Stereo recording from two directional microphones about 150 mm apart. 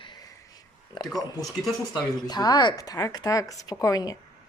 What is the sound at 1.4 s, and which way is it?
Speech, centre (ahead or behind).